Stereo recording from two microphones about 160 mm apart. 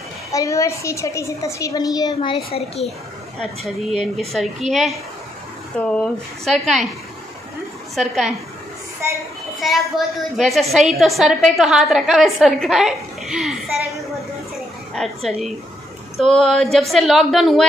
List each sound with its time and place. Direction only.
0.3 s a woman's voice: 20° left (ahead or behind)
2.3 s speech: 40° left (ahead or behind)
3.3 s a woman's voice: centre (ahead or behind)
7.9 s a woman's voice: centre (ahead or behind)
9.6 s a woman's voice: centre (ahead or behind)
15.0 s a woman's voice: centre (ahead or behind)